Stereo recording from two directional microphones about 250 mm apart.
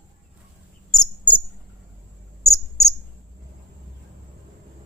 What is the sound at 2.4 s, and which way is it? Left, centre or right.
Cricket, left.